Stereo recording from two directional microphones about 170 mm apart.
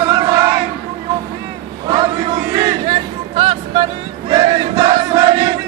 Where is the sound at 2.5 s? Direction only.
25° right (ahead or behind).